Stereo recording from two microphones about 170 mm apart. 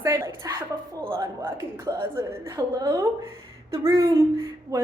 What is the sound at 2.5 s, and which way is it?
A woman's voice, 20° right (ahead or behind).